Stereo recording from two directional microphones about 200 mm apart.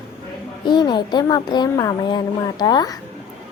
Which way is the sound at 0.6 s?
20° left (ahead or behind).